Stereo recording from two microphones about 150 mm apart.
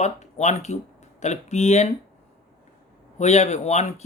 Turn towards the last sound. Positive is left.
turn(degrees=50)  # may be behind; listen again after turning